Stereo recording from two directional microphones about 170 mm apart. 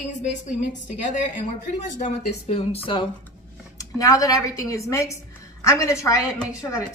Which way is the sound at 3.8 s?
20° left (ahead or behind).